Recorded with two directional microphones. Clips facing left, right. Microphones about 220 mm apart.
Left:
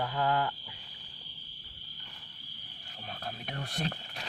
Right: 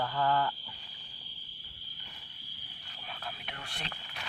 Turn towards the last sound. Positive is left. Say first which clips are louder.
# left 8 dB
turn(degrees=45)  # may be behind; listen again after turning